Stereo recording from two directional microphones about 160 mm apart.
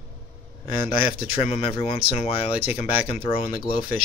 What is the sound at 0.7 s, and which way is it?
Speech, 30° left (ahead or behind).